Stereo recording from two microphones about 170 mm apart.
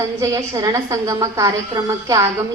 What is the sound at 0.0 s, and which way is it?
A woman's voice, 20° right (ahead or behind).